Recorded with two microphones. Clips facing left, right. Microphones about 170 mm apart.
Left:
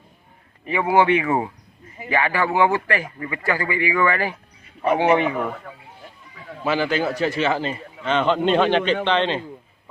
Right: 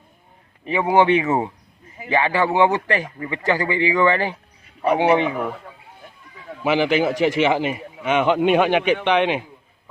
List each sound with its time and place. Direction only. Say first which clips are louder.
0.6 s a man's voice: right 1 dB; 20° right (ahead or behind)
6.7 s a man's voice: right 3 dB; 15° right (ahead or behind)